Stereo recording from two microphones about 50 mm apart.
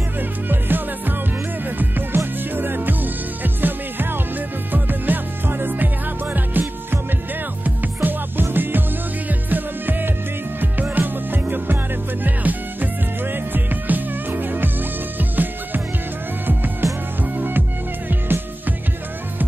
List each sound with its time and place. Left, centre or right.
0.5 s music: right
7.6 s music: right
16.8 s music: right
17.2 s music: right